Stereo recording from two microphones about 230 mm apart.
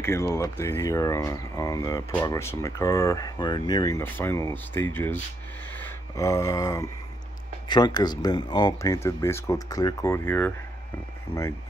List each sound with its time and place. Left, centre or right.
0.3 s speech: centre
11.3 s speech: left